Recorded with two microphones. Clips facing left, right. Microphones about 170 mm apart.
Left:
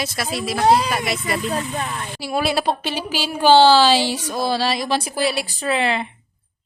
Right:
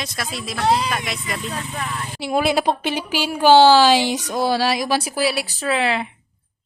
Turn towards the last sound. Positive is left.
turn(degrees=0)  # may be behind; listen again after turning